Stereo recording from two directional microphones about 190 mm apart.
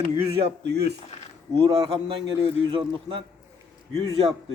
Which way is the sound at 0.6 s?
60° right (ahead or behind).